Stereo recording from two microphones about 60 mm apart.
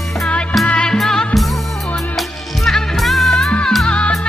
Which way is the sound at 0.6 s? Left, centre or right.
Left.